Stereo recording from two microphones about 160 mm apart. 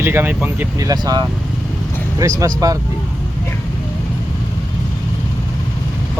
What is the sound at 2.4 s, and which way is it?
Speech, 20° right (ahead or behind).